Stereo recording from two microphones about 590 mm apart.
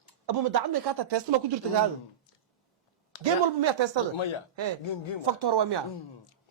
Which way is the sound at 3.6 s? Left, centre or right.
Right.